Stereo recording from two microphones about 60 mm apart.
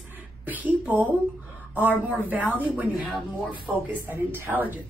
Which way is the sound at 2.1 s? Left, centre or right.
Right.